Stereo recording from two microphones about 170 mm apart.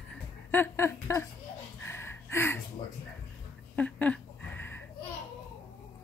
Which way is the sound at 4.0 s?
10° left (ahead or behind).